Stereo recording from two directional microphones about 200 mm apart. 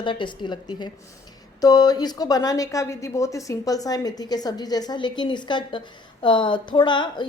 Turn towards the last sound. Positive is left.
turn(degrees=25)  # may be behind; listen again after turning